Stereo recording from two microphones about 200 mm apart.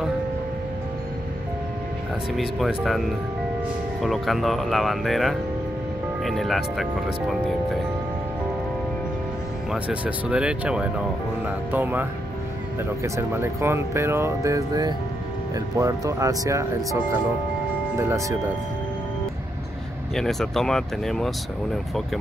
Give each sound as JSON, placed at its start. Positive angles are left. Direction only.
{"t": 2.3, "sound": "speech", "side_deg": 0}
{"t": 9.7, "sound": "speech", "side_deg": -5}
{"t": 20.2, "sound": "speech", "side_deg": 0}